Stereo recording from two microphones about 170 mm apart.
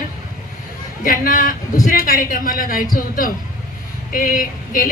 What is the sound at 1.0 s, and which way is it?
A woman's voice, 55° left (ahead or behind).